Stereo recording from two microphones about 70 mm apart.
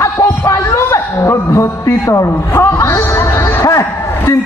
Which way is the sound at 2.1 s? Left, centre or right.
Left.